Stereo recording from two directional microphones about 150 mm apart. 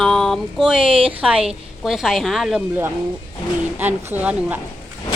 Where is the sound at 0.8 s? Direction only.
35° right (ahead or behind).